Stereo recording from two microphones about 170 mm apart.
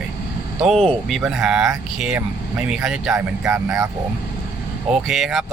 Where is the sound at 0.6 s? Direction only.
5° left (ahead or behind).